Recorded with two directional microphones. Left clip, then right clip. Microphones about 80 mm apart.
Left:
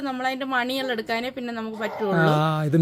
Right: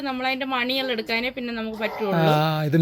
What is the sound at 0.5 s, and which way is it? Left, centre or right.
Speech, left.